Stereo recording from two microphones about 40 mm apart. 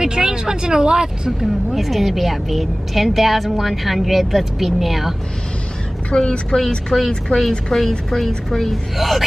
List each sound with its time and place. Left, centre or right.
0.0 s vehicle: centre
1.4 s a woman's voice: centre
6.1 s a woman's voice: left
7.3 s a woman's voice: centre
8.9 s a woman's voice: centre